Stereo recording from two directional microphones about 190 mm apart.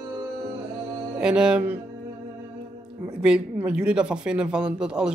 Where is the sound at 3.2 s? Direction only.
5° right (ahead or behind).